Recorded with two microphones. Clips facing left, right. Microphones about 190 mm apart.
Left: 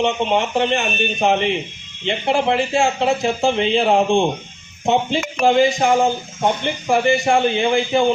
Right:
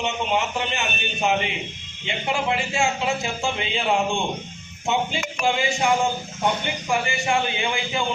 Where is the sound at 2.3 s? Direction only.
35° left (ahead or behind).